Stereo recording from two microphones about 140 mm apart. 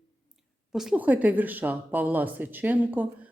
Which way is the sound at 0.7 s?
5° right (ahead or behind).